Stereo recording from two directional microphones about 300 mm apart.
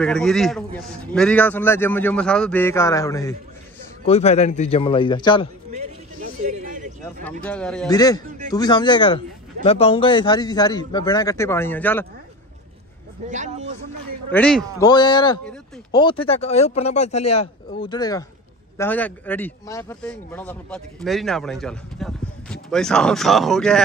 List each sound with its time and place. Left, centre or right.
0.0 s speech: centre
6.4 s a sound: right
7.4 s a man's voice: centre
13.3 s speech: right
14.3 s speech: centre
14.9 s a man's voice: centre